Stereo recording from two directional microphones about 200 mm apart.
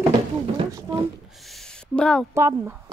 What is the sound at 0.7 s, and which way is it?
Speech, 20° right (ahead or behind).